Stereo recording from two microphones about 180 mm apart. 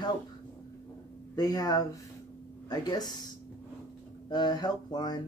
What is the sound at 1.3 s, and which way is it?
Speech, 20° left (ahead or behind).